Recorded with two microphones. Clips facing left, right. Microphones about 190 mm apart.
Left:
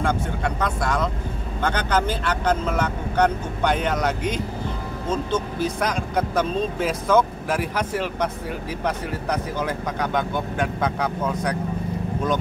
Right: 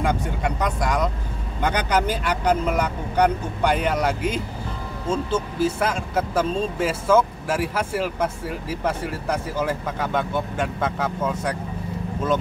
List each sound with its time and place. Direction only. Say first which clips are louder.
0.0 s speech: even; 15° right (ahead or behind)
5.0 s speech: right 1 dB; 30° right (ahead or behind)
5.8 s speech: even; 5° right (ahead or behind)